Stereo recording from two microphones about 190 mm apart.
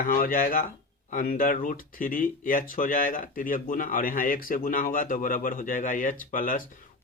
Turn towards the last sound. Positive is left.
turn(degrees=45)  # may be behind; listen again after turning